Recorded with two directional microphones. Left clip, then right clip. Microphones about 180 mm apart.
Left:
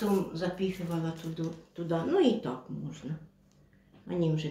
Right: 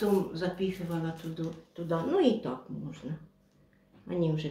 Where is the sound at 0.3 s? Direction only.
Centre (ahead or behind).